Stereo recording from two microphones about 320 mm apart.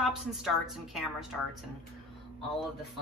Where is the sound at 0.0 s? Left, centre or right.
Centre.